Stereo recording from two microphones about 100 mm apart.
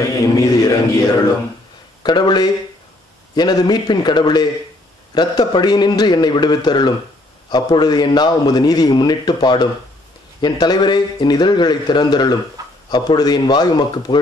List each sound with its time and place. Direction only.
0.0 s speech: 35° left (ahead or behind)
2.0 s a man's voice: 50° left (ahead or behind)
12.6 s a sound: 35° right (ahead or behind)
12.9 s a man's voice: 45° left (ahead or behind)